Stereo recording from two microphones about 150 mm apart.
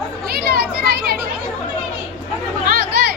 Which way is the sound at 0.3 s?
90° right.